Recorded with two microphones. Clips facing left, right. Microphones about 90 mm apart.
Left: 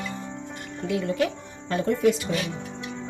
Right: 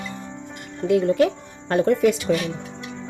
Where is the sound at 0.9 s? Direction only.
50° right (ahead or behind).